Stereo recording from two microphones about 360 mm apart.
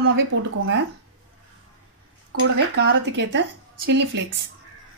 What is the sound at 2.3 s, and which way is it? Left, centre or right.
Speech, right.